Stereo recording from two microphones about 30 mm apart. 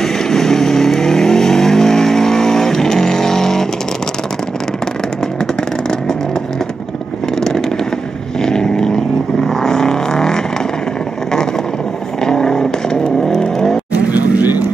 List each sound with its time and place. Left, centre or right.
0.0 s vehicle: centre
7.3 s vehicle: centre
12.2 s vehicle: left
13.9 s vehicle: right
14.4 s vehicle: right